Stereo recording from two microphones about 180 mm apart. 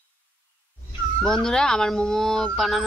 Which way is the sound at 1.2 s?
5° left (ahead or behind).